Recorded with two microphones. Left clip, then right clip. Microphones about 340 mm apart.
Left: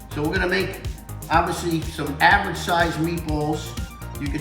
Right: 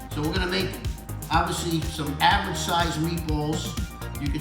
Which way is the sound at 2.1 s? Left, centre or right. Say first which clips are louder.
Left 4 dB; centre.